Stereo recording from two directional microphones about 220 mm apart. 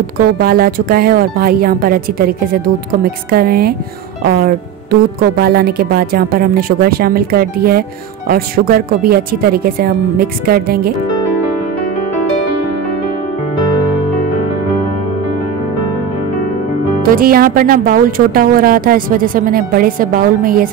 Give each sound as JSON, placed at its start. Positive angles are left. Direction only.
{"t": 0.2, "sound": "speech", "side_deg": -40}
{"t": 17.0, "sound": "speech", "side_deg": -40}